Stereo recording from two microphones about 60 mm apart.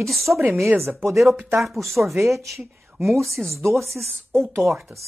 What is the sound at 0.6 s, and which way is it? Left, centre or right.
Speech, right.